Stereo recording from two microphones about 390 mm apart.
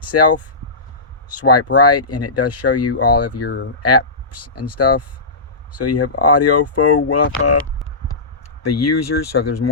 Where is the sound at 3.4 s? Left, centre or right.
Left.